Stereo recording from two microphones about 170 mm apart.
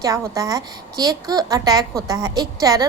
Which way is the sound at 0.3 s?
20° right (ahead or behind).